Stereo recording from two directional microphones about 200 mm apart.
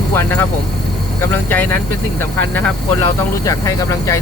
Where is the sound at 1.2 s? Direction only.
10° left (ahead or behind).